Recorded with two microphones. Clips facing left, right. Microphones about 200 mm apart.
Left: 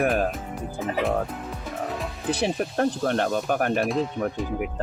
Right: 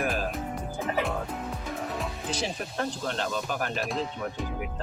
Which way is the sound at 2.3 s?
60° left (ahead or behind).